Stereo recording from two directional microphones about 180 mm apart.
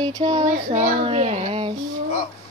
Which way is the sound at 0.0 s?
25° right (ahead or behind).